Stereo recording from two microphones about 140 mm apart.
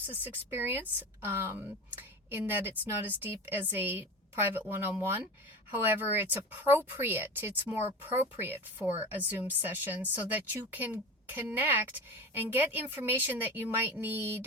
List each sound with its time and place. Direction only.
0.0 s a woman's voice: 15° right (ahead or behind)